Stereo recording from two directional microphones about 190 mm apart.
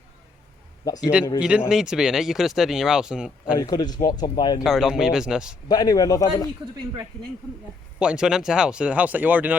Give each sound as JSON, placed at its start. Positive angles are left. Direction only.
{"t": 0.9, "sound": "speech", "side_deg": 20}
{"t": 1.4, "sound": "speech", "side_deg": -5}
{"t": 3.5, "sound": "speech", "side_deg": 20}
{"t": 4.6, "sound": "speech", "side_deg": 0}
{"t": 5.6, "sound": "speech", "side_deg": 20}
{"t": 7.9, "sound": "speech", "side_deg": -5}